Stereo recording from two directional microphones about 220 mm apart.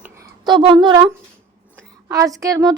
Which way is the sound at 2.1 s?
15° right (ahead or behind).